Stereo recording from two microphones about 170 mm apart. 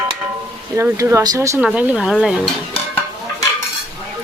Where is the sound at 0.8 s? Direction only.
15° right (ahead or behind).